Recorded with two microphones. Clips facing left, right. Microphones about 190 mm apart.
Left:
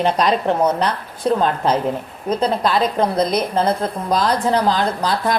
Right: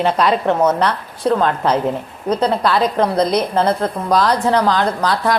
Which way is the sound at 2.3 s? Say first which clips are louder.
Right 2 dB; 10° left (ahead or behind).